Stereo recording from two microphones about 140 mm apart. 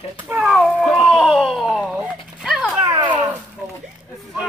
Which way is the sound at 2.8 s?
35° right (ahead or behind).